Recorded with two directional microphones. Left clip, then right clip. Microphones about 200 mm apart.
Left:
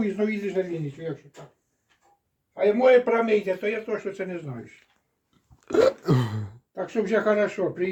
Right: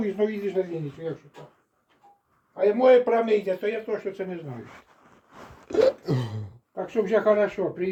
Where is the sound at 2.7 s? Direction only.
10° left (ahead or behind).